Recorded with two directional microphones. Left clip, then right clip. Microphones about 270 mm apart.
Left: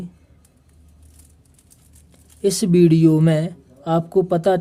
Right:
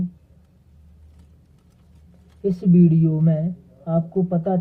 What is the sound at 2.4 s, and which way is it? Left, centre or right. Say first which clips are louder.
Speech: left 5 dB; left.